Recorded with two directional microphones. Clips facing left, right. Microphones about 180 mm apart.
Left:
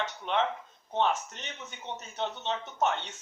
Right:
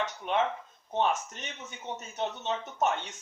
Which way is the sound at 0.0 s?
15° right (ahead or behind).